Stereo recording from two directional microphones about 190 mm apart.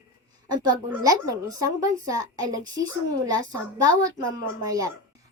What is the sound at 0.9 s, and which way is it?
A woman's voice, 20° right (ahead or behind).